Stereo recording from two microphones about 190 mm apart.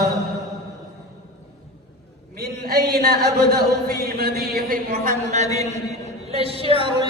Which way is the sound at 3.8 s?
55° right (ahead or behind).